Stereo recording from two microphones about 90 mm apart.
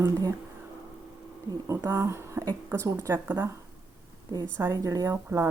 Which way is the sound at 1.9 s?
30° right (ahead or behind).